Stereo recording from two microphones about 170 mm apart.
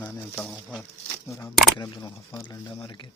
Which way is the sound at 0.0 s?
Centre (ahead or behind).